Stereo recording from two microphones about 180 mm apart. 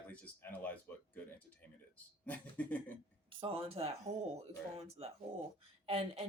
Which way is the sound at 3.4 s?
30° right (ahead or behind).